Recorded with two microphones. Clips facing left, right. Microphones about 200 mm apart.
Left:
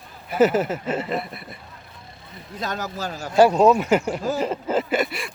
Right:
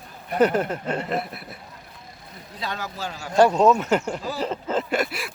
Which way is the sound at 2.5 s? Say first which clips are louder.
Left 3 dB; 45° left (ahead or behind).